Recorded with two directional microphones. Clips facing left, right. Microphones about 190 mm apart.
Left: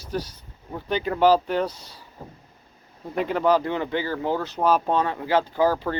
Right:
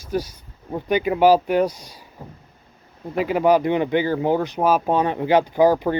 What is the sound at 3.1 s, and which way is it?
Speech, 10° right (ahead or behind).